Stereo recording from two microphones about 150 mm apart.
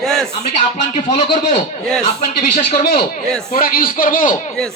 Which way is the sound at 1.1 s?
40° left (ahead or behind).